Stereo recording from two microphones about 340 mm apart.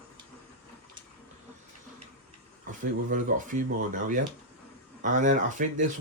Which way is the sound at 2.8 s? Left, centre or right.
Right.